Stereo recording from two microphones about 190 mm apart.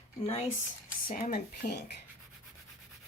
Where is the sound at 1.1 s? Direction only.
40° left (ahead or behind).